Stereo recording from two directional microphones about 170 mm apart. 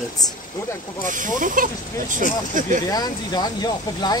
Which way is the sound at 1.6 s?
55° right (ahead or behind).